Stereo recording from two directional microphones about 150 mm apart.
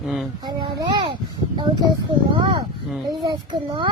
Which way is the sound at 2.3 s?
30° right (ahead or behind).